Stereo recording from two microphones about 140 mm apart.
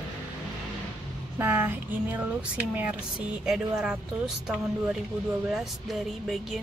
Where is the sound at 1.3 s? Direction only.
15° right (ahead or behind).